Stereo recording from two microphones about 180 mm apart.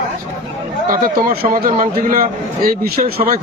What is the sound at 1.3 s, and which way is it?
Speech, 50° right (ahead or behind).